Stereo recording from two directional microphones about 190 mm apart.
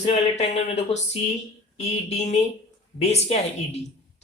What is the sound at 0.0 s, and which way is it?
Speech, 35° left (ahead or behind).